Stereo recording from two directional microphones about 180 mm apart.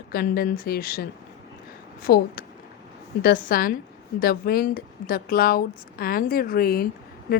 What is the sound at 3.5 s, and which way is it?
A woman's voice, 50° left (ahead or behind).